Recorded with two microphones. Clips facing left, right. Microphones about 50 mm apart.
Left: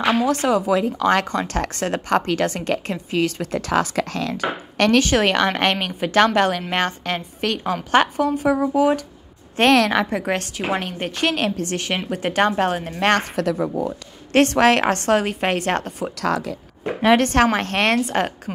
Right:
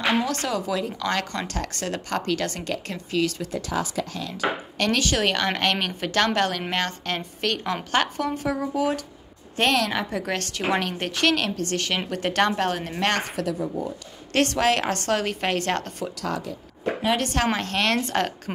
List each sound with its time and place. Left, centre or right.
0.2 s speech: left
1.2 s speech: left
1.5 s a woman's voice: left
3.5 s speech: left
4.7 s speech: left
5.0 s a woman's voice: left
9.6 s a woman's voice: left
10.2 s speech: left
10.5 s a woman's voice: centre
11.3 s speech: left
13.0 s speech: left
14.3 s a woman's voice: left
17.0 s a woman's voice: left
17.9 s speech: left